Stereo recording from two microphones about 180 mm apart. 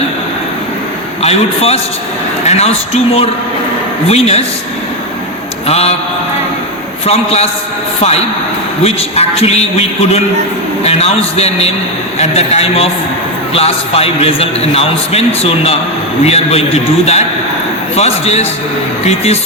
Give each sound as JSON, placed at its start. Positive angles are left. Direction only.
{"t": 1.2, "sound": "a man's voice", "side_deg": 35}
{"t": 5.6, "sound": "a man's voice", "side_deg": 35}
{"t": 7.0, "sound": "a man's voice", "side_deg": 35}
{"t": 8.8, "sound": "a man's voice", "side_deg": 35}